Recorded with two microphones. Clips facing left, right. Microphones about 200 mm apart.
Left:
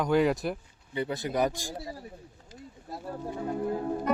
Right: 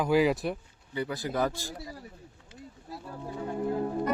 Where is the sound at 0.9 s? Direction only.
25° left (ahead or behind).